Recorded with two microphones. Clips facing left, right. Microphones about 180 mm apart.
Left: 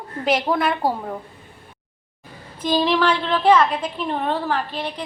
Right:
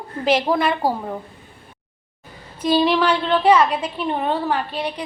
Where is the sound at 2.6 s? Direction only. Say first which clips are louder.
Right 2 dB; 5° right (ahead or behind).